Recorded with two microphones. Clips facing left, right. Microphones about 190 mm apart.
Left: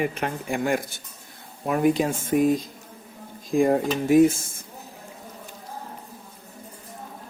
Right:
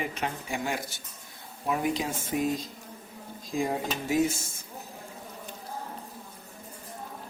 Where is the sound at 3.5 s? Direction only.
55° left (ahead or behind).